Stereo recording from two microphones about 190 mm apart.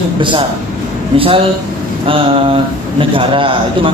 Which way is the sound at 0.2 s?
25° right (ahead or behind).